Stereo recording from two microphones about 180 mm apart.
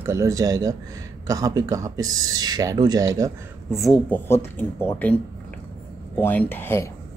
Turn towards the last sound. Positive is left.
turn(degrees=15)  # may be behind; listen again after turning